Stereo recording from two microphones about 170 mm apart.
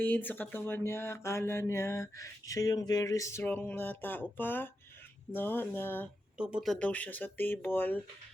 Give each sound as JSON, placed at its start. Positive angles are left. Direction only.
{"t": 0.0, "sound": "speech", "side_deg": 10}
{"t": 6.3, "sound": "speech", "side_deg": -5}